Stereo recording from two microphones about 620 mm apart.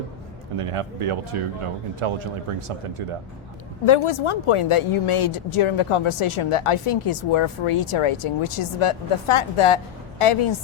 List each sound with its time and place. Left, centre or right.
0.5 s speech: right
3.8 s a woman's voice: left